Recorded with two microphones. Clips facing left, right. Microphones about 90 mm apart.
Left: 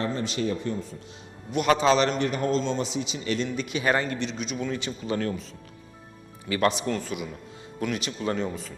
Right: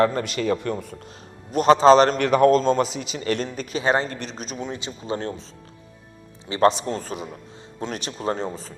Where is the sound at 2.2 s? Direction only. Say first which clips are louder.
Right 9 dB; 75° right (ahead or behind).